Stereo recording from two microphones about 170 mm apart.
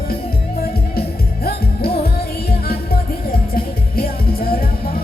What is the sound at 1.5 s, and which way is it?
Music, 65° left (ahead or behind).